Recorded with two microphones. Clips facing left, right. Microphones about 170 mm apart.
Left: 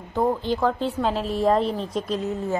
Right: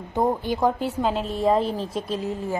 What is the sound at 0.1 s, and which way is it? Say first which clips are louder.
Speech: even; 15° right (ahead or behind).